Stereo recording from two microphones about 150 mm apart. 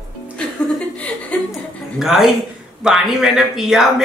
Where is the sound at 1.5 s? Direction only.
Centre (ahead or behind).